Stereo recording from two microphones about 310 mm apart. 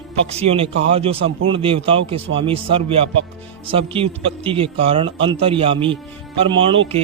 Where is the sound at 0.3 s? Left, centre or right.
Centre.